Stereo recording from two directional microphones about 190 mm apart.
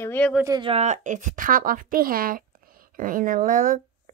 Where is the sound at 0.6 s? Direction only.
35° right (ahead or behind).